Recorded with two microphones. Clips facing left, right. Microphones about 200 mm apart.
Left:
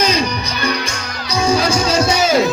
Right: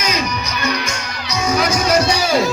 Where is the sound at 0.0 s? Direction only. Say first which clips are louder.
Left 4 dB; 30° left (ahead or behind).